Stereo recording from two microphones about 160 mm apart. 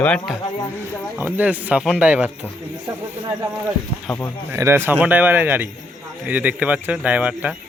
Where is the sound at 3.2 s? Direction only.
20° right (ahead or behind).